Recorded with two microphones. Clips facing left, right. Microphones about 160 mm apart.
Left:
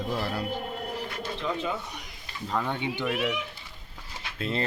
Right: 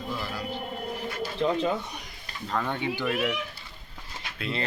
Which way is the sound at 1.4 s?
35° right (ahead or behind).